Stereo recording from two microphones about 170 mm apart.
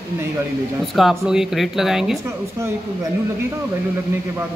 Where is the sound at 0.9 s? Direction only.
5° right (ahead or behind).